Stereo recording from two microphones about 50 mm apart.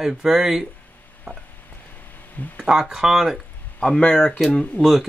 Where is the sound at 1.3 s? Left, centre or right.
Right.